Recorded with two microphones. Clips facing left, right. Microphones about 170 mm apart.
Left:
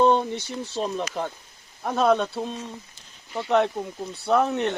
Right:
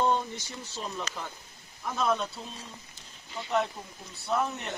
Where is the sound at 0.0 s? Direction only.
70° left (ahead or behind).